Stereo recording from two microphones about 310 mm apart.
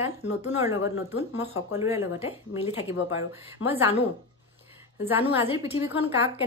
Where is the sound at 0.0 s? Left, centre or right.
Centre.